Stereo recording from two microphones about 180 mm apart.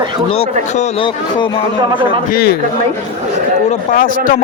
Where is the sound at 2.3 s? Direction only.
60° left (ahead or behind).